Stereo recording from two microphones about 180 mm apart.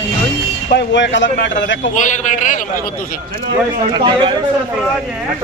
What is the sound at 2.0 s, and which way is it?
Speech, 45° left (ahead or behind).